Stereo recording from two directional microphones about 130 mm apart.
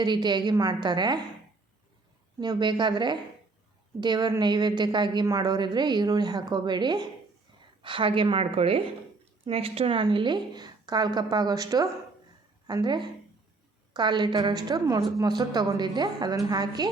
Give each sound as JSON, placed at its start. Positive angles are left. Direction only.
{"t": 0.0, "sound": "a woman's voice", "side_deg": -35}
{"t": 2.4, "sound": "a woman's voice", "side_deg": -35}